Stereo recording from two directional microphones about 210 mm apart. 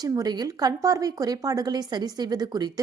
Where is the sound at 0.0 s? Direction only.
20° right (ahead or behind).